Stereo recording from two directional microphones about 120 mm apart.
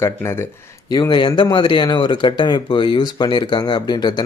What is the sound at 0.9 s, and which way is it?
Speech, 35° left (ahead or behind).